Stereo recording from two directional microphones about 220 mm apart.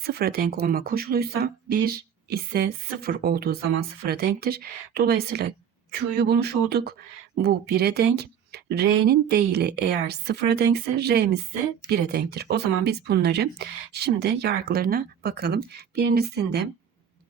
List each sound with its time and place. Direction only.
0.0 s speech: 45° right (ahead or behind)